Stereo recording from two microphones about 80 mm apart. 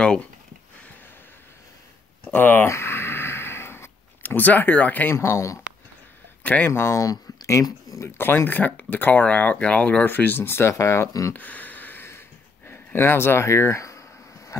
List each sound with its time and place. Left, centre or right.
0.0 s speech: centre
2.3 s speech: left
2.7 s a sound: left
5.1 s speech: left
6.4 s speech: centre
6.7 s speech: left
11.3 s a sound: left